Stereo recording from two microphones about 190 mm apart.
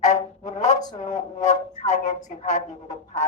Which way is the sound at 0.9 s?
40° left (ahead or behind).